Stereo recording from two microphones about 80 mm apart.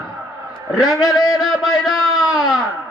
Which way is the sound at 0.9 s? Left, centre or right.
Left.